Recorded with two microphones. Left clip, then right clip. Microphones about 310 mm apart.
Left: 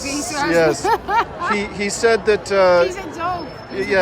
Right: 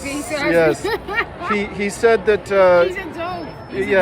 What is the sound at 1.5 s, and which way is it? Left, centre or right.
Speech, left.